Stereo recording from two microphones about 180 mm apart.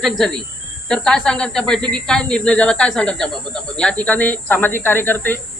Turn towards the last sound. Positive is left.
turn(degrees=10)  # may be behind; listen again after turning